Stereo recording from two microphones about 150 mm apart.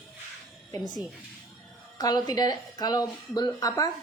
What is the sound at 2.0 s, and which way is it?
Speech, 25° left (ahead or behind).